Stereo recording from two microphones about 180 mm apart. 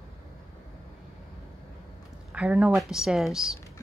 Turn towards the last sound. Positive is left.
turn(degrees=-5)  # may be behind; listen again after turning